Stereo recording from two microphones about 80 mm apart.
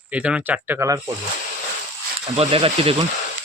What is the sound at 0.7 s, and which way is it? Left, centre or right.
Speech, right.